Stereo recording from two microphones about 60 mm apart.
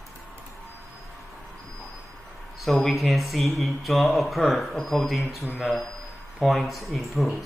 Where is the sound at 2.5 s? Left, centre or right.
Centre.